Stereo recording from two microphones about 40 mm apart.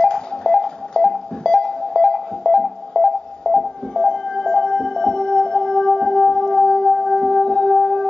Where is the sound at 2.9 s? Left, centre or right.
Left.